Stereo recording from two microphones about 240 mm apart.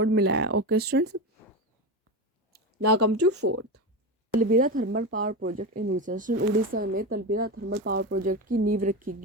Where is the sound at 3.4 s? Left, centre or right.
Right.